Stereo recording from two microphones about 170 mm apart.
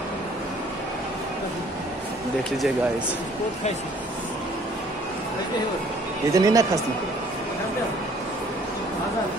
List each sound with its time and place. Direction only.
6.3 s speech: 20° right (ahead or behind)